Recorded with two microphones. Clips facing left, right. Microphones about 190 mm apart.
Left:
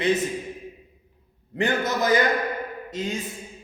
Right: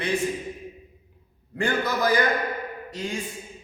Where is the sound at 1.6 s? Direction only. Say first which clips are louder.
Left 1 dB; 20° left (ahead or behind).